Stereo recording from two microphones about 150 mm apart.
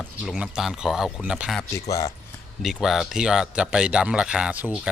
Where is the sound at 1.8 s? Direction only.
20° left (ahead or behind).